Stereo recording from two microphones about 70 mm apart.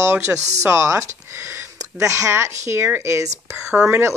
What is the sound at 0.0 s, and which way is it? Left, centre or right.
Speech, right.